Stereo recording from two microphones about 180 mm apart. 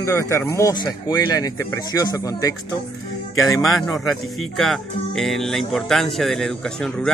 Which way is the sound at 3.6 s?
Centre (ahead or behind).